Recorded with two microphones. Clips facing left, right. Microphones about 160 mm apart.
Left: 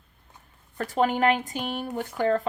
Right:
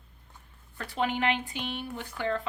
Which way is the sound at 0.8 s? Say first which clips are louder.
Left 6 dB; 45° left (ahead or behind).